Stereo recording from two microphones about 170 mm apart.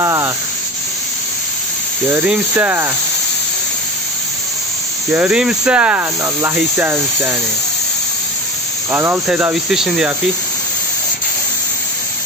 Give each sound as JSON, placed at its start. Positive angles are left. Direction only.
{"t": 0.0, "sound": "a sound", "side_deg": -15}
{"t": 2.0, "sound": "speech", "side_deg": -10}
{"t": 5.1, "sound": "speech", "side_deg": -5}
{"t": 8.9, "sound": "speech", "side_deg": -15}